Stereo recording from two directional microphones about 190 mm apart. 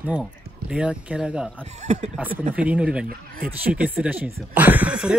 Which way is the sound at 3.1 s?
50° right (ahead or behind).